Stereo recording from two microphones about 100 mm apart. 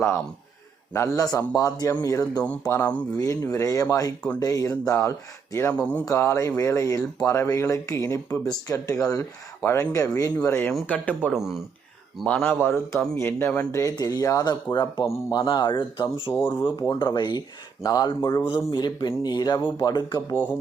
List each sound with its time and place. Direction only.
0.9 s speech: 30° left (ahead or behind)
2.6 s speech: 25° left (ahead or behind)
11.3 s speech: 5° right (ahead or behind)
12.2 s speech: 10° left (ahead or behind)
12.5 s speech: 25° left (ahead or behind)
13.7 s speech: 30° left (ahead or behind); by 16.0 s 55° left (ahead or behind)
16.3 s speech: 25° left (ahead or behind)
16.6 s speech: 55° left (ahead or behind); by 18.4 s 40° left (ahead or behind)
18.4 s speech: 50° left (ahead or behind)
20.3 s speech: 20° left (ahead or behind)